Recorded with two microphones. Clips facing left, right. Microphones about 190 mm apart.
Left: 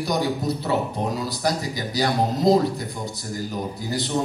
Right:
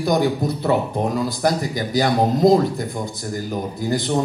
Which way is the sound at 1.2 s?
50° right (ahead or behind).